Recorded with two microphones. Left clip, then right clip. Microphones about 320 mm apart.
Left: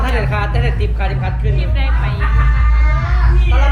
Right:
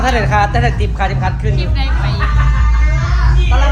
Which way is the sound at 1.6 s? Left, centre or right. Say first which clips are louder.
Right 2 dB; centre.